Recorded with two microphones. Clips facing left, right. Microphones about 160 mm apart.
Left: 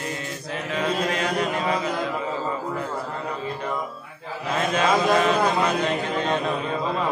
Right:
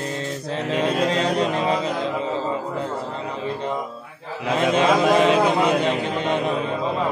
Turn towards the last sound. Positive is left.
turn(degrees=-20)  # may be behind; listen again after turning